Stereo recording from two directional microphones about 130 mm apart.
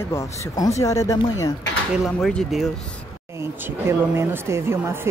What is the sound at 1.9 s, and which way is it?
Speech, centre (ahead or behind).